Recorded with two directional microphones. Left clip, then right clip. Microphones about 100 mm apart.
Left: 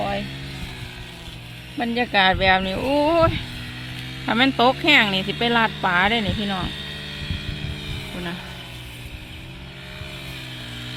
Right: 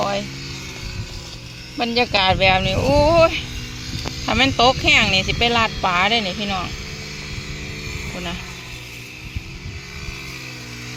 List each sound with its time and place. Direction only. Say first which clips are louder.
1.8 s speech: right 1 dB; 15° left (ahead or behind); by 6.7 s 40° left (ahead or behind)